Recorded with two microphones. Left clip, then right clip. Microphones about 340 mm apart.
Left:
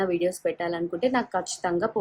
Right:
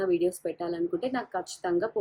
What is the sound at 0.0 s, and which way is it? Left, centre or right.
A woman's voice, left.